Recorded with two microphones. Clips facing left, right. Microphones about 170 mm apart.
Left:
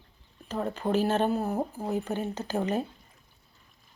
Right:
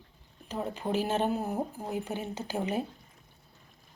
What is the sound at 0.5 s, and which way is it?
Speech, 10° right (ahead or behind).